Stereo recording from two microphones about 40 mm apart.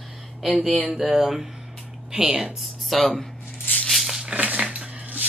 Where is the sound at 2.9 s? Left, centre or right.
Centre.